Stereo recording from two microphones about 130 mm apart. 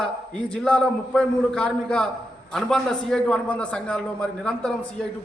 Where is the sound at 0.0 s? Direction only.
5° left (ahead or behind).